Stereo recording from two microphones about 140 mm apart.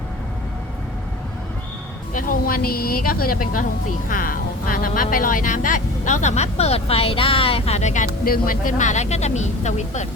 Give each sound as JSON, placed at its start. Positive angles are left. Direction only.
{"t": 2.1, "sound": "a woman's voice", "side_deg": 75}